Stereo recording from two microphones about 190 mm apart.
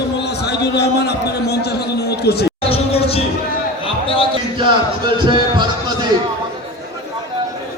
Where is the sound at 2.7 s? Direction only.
30° left (ahead or behind).